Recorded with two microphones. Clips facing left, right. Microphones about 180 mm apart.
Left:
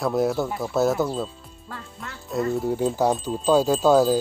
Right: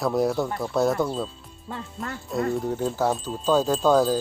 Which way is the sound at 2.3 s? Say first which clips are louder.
Left 2 dB; centre (ahead or behind).